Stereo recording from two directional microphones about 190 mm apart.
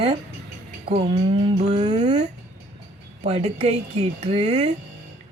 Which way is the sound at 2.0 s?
40° right (ahead or behind).